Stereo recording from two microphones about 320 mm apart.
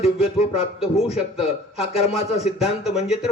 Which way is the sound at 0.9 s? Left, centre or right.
Centre.